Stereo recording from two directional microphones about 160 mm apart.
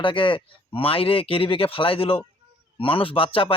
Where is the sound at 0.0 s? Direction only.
30° left (ahead or behind).